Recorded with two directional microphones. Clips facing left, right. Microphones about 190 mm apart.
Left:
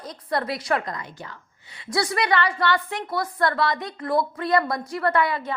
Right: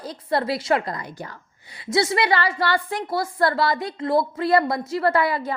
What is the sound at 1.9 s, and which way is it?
A woman's voice, 25° right (ahead or behind).